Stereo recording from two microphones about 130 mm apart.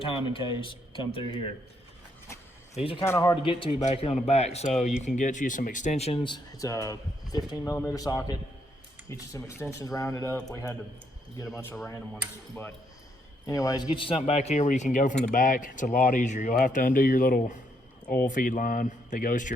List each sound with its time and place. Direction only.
0.0 s speech: 40° left (ahead or behind)
2.7 s speech: 45° left (ahead or behind)
3.0 s speech: 25° left (ahead or behind)
3.7 s a man's voice: 60° left (ahead or behind)
5.0 s speech: 75° left (ahead or behind); by 10.8 s 20° left (ahead or behind)
12.1 s speech: 15° left (ahead or behind)
13.9 s speech: 40° left (ahead or behind)
14.2 s a man's voice: 55° left (ahead or behind)
15.2 s speech: 90° left